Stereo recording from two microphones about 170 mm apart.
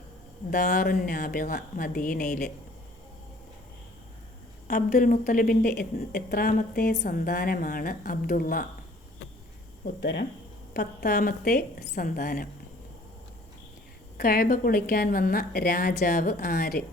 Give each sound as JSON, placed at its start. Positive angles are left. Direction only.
{"t": 0.7, "sound": "a woman's voice", "side_deg": 60}
{"t": 4.7, "sound": "a woman's voice", "side_deg": 50}
{"t": 10.0, "sound": "speech", "side_deg": 90}
{"t": 10.8, "sound": "a woman's voice", "side_deg": 65}
{"t": 14.2, "sound": "a woman's voice", "side_deg": 60}